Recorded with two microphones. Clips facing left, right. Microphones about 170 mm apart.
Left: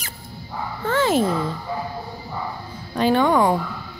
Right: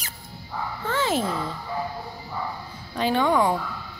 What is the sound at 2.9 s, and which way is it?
Speech, 55° left (ahead or behind).